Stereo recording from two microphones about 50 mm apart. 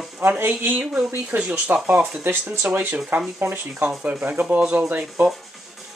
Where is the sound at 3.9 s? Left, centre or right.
Right.